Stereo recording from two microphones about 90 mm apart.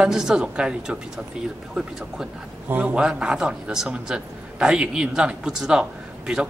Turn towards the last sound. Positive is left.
turn(degrees=-5)  # may be behind; listen again after turning